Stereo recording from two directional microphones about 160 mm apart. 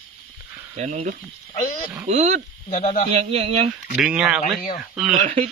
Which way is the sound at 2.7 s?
45° left (ahead or behind).